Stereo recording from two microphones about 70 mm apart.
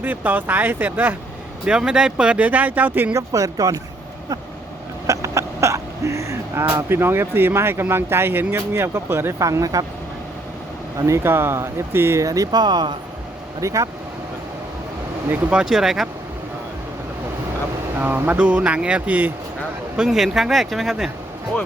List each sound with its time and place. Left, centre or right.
0.0 s speech: right
1.6 s speech: centre
3.1 s speech: right
5.0 s speech: right
9.4 s speech: right
10.9 s speech: right
12.2 s speech: right
13.6 s speech: right
15.4 s speech: centre
18.0 s speech: right
18.3 s speech: centre
20.0 s speech: centre